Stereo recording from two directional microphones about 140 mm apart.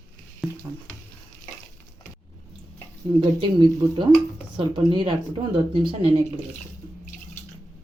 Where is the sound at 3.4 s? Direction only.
35° right (ahead or behind).